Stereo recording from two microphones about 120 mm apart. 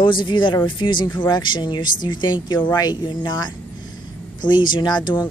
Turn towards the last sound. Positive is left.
turn(degrees=40)  # may be behind; listen again after turning